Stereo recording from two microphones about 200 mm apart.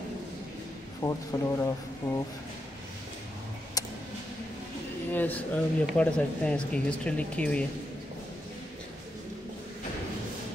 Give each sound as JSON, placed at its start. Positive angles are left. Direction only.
{"t": 1.0, "sound": "speech", "side_deg": 15}
{"t": 3.8, "sound": "tick", "side_deg": 20}
{"t": 5.1, "sound": "speech", "side_deg": 10}